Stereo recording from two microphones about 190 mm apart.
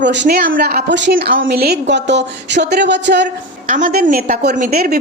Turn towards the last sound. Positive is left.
turn(degrees=-55)  # may be behind; listen again after turning